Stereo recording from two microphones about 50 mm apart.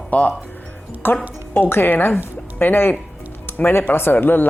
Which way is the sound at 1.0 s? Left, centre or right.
Left.